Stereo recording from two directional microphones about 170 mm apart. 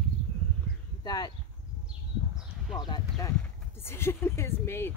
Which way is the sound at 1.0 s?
25° left (ahead or behind).